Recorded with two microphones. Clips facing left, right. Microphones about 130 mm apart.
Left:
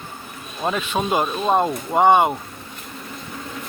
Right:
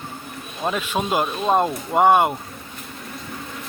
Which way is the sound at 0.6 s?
Centre (ahead or behind).